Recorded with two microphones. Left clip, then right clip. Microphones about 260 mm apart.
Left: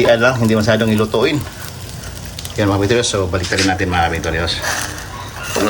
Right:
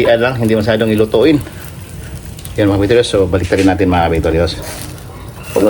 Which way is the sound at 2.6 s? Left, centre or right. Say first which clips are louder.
Right 4 dB; centre.